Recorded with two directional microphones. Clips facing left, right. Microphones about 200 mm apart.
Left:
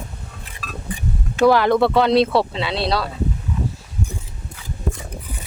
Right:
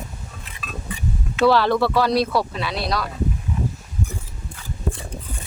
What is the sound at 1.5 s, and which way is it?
Speech, 15° left (ahead or behind).